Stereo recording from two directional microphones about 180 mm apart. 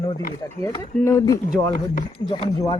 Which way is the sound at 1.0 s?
15° left (ahead or behind).